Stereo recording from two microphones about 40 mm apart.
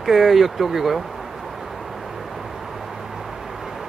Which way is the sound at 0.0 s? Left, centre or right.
Centre.